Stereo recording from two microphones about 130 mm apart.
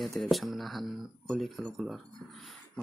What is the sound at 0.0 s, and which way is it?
Speech, centre (ahead or behind).